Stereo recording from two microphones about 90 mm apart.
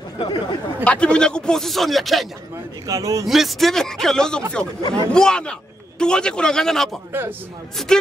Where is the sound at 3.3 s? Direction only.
Centre (ahead or behind).